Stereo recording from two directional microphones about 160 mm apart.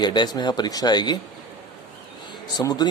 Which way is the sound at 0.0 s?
30° left (ahead or behind).